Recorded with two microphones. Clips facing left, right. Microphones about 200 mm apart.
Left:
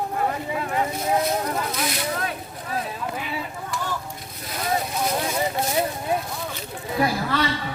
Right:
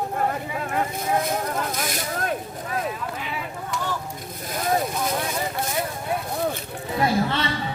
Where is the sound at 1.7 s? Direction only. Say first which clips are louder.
Left 1 dB; 45° right (ahead or behind).